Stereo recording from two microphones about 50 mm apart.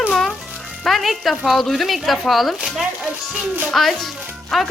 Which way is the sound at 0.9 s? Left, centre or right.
Centre.